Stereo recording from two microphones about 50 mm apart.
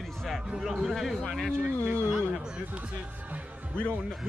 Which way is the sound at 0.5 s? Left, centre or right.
Centre.